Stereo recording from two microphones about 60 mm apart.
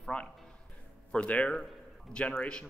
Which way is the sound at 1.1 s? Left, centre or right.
Left.